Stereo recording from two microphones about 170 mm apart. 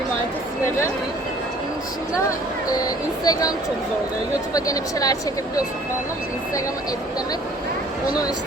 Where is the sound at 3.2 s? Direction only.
20° left (ahead or behind).